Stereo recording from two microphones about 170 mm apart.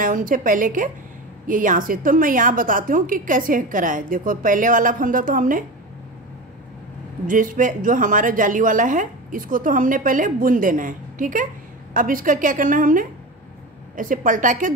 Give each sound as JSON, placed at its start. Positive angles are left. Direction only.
{"t": 0.0, "sound": "a woman's voice", "side_deg": -50}
{"t": 7.2, "sound": "a woman's voice", "side_deg": -50}